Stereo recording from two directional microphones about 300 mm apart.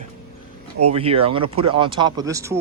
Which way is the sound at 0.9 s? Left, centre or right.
Centre.